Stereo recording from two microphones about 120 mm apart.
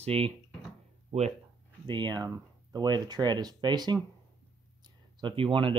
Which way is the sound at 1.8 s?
40° right (ahead or behind).